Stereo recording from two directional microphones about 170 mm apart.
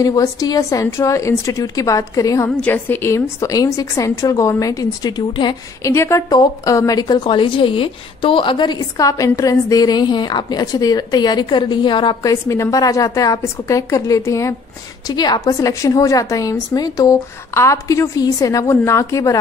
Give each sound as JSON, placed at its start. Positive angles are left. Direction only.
{"t": 0.0, "sound": "a woman's voice", "side_deg": 20}
{"t": 5.9, "sound": "a woman's voice", "side_deg": 15}